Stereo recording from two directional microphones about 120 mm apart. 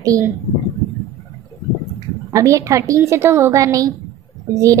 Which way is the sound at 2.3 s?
25° right (ahead or behind).